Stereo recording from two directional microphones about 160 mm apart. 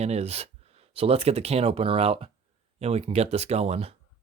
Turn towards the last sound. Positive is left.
turn(degrees=-40)  # may be behind; listen again after turning